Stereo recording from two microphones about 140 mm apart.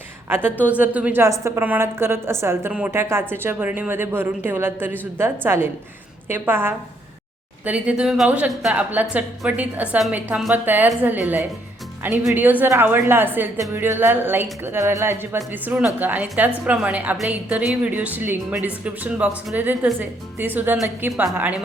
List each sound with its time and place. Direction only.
0.3 s a woman's voice: 15° right (ahead or behind)